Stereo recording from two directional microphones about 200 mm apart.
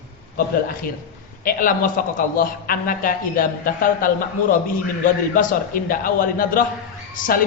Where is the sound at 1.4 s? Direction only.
45° left (ahead or behind).